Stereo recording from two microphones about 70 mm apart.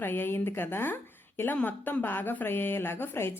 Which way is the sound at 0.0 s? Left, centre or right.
Left.